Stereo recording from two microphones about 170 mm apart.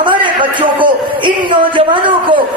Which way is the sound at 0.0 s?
30° right (ahead or behind).